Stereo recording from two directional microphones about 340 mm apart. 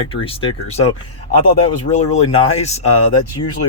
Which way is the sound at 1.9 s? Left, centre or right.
Centre.